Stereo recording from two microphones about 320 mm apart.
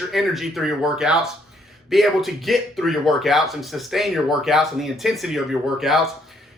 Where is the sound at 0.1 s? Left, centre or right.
Centre.